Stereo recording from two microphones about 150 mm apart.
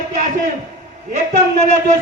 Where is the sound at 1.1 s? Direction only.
50° right (ahead or behind).